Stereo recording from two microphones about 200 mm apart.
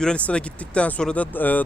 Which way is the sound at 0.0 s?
5° left (ahead or behind).